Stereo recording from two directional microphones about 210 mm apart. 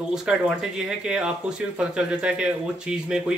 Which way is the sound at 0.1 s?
Centre (ahead or behind).